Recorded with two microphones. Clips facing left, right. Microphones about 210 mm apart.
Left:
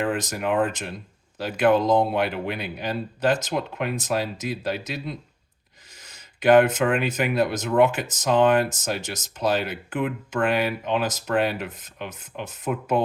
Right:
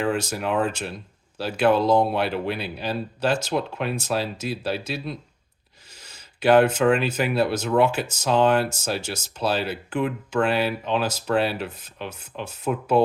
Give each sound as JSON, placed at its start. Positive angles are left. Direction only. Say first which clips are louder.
{"t": 0.1, "sound": "speech", "louder": "even", "side_deg": 15}